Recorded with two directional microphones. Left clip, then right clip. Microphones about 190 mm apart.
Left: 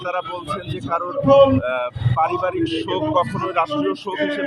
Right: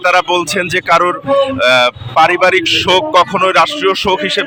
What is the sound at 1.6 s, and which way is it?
A man's voice, 15° right (ahead or behind).